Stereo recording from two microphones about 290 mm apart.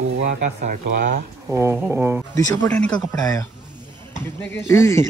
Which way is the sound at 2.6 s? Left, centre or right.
Centre.